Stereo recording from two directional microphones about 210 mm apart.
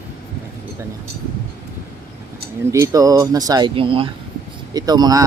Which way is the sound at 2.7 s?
15° right (ahead or behind).